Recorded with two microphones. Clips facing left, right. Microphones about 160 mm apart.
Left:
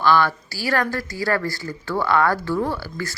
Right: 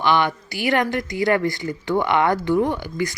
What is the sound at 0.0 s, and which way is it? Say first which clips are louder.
Speech: left 1 dB; 20° right (ahead or behind).